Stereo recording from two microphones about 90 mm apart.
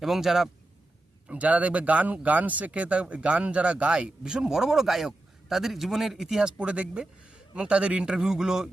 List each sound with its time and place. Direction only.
0.0 s a man's voice: 5° right (ahead or behind)
1.3 s speech: 15° right (ahead or behind)